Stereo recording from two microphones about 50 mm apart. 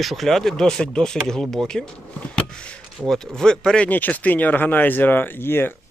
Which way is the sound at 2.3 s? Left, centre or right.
Centre.